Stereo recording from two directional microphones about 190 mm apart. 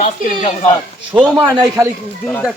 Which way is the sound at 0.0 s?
40° left (ahead or behind).